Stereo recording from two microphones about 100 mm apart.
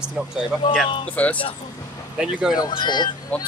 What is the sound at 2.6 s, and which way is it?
Speech, 50° left (ahead or behind).